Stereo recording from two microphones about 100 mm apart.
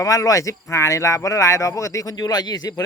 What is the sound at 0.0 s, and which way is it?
Speech, 35° left (ahead or behind).